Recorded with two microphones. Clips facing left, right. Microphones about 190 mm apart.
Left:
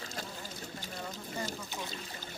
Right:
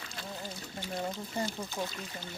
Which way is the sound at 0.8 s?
40° left (ahead or behind).